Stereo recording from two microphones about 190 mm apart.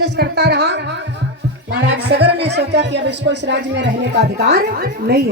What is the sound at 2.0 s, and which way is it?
Speech, 60° right (ahead or behind).